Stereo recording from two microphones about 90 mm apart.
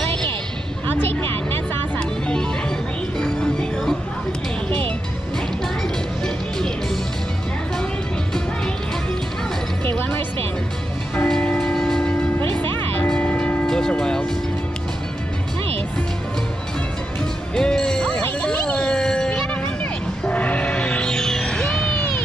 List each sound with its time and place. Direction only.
2.0 s music: 10° left (ahead or behind)
9.8 s music: 25° left (ahead or behind)
11.2 s train: 5° left (ahead or behind)
13.1 s church bell: 10° left (ahead or behind)
17.6 s music: 5° left (ahead or behind)